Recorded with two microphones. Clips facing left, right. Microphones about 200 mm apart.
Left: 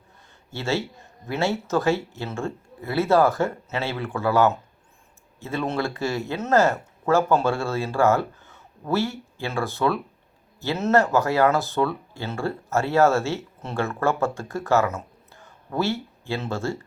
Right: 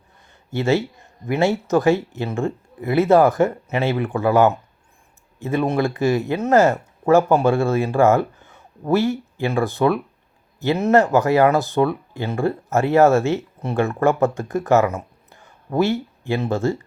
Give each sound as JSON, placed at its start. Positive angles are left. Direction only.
{"t": 0.5, "sound": "speech", "side_deg": -15}